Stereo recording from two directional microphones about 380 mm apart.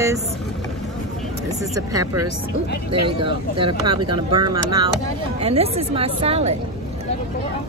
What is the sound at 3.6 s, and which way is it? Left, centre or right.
Speech, centre.